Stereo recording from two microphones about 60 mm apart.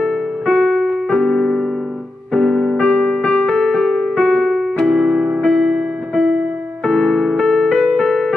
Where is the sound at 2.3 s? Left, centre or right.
Centre.